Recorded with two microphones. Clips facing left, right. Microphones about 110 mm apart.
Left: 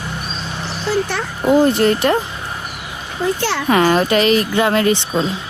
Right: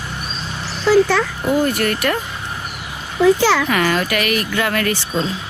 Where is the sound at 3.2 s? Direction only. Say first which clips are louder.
Right 7 dB; 90° right.